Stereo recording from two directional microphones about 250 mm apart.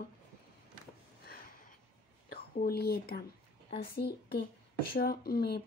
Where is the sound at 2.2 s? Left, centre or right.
Left.